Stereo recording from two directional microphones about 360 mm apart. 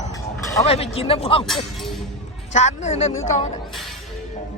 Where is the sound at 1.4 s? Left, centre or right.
Centre.